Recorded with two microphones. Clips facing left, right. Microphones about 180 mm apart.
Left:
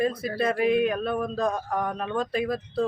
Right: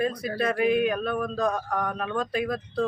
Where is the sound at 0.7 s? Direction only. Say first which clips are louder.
Left 1 dB; centre (ahead or behind).